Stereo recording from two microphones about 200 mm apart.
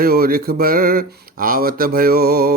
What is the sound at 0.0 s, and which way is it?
Speech, 50° right (ahead or behind).